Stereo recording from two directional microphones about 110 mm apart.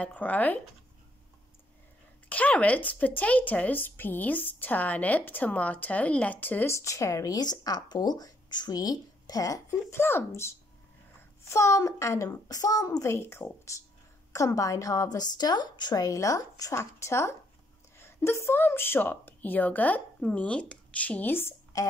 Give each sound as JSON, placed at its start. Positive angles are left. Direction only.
{"t": 0.0, "sound": "speech", "side_deg": 15}
{"t": 2.2, "sound": "a woman's voice", "side_deg": 15}